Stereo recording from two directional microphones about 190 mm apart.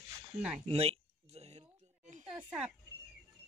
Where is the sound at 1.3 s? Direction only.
35° right (ahead or behind).